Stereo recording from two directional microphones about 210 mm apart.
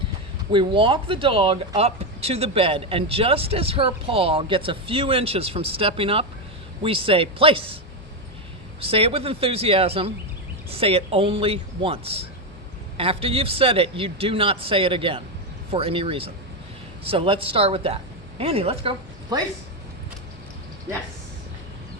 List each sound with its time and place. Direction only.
0.5 s speech: 25° right (ahead or behind)
8.8 s speech: 25° right (ahead or behind)